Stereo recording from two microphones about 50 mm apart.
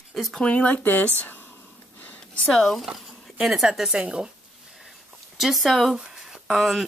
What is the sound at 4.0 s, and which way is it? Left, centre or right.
Speech, centre.